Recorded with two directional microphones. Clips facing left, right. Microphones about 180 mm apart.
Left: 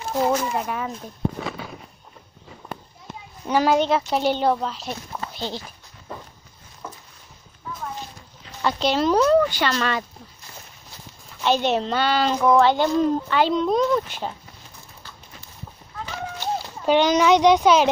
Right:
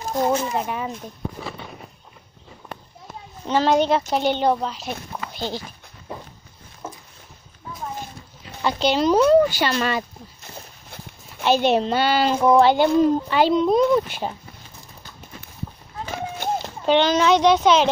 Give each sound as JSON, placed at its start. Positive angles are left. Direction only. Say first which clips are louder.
{"t": 0.3, "sound": "speech", "louder": "right 1 dB", "side_deg": -25}
{"t": 3.4, "sound": "a woman's voice", "louder": "right 1 dB", "side_deg": 10}
{"t": 5.3, "sound": "dog", "louder": "right 3 dB", "side_deg": -5}
{"t": 6.8, "sound": "a sound", "louder": "right 2 dB", "side_deg": -25}
{"t": 8.6, "sound": "a child's voice", "louder": "right 1 dB", "side_deg": 0}
{"t": 11.4, "sound": "a child's voice", "louder": "right 3 dB", "side_deg": -10}
{"t": 16.1, "sound": "run", "louder": "right 2 dB", "side_deg": -50}
{"t": 16.8, "sound": "speech", "louder": "even", "side_deg": 10}